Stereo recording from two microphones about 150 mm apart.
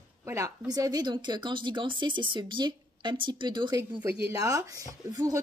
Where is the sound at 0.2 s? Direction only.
20° right (ahead or behind).